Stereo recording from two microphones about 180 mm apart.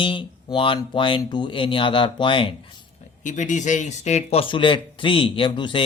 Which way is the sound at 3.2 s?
45° left (ahead or behind).